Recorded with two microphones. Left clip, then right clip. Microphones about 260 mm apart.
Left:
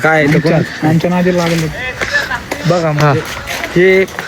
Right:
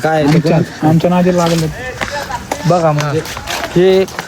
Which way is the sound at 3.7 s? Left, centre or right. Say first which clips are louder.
Left 1 dB; centre.